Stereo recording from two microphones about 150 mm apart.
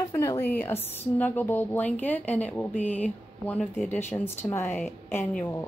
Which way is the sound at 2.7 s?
50° left (ahead or behind).